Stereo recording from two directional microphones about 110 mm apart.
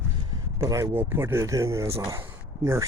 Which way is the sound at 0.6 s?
30° right (ahead or behind).